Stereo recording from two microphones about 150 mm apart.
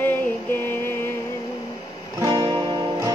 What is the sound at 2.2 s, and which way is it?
Music, 30° right (ahead or behind).